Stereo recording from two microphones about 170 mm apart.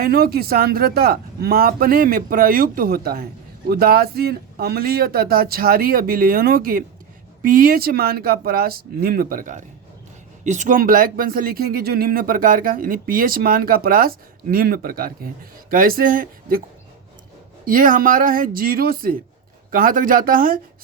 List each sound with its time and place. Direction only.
0.0 s speech: 65° right (ahead or behind)
17.7 s speech: 55° right (ahead or behind)